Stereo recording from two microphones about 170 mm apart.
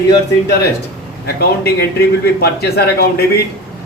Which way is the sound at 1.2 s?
70° left (ahead or behind).